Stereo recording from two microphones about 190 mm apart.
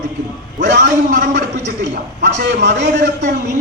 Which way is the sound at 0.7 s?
65° right (ahead or behind).